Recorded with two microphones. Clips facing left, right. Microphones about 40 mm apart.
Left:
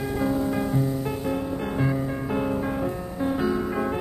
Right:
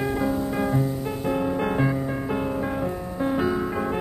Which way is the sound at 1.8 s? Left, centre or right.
Centre.